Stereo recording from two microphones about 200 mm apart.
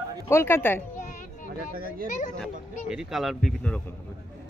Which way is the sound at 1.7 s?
45° right (ahead or behind).